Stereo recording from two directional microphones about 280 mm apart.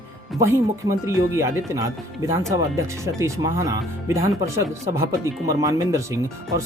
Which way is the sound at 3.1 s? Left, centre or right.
Centre.